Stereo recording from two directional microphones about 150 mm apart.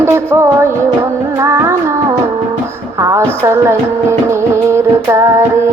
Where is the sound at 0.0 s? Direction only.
20° right (ahead or behind).